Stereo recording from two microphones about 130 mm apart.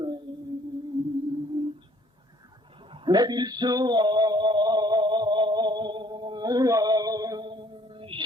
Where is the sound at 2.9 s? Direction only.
30° right (ahead or behind).